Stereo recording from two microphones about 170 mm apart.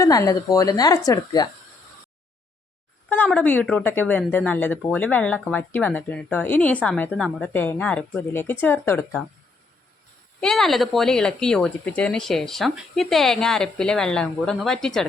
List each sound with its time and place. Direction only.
0.0 s a woman's voice: 20° left (ahead or behind)
3.1 s speech: 10° left (ahead or behind)
10.4 s speech: centre (ahead or behind)